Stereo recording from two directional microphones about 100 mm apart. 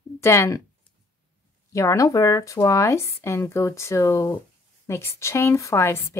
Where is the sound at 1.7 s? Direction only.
30° left (ahead or behind).